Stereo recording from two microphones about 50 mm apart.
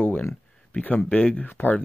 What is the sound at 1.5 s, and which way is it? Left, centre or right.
Speech, left.